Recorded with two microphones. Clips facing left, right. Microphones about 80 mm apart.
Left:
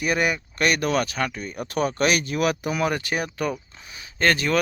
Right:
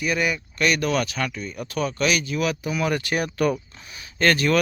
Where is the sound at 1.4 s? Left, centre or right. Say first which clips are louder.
Left 2 dB; left.